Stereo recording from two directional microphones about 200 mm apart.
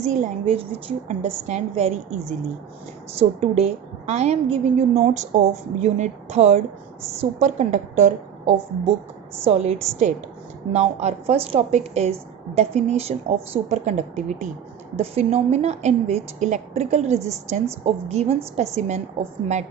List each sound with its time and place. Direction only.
0.0 s a woman's voice: 35° right (ahead or behind)